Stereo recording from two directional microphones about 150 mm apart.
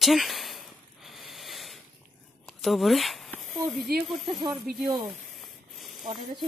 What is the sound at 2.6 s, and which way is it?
Speech, centre (ahead or behind).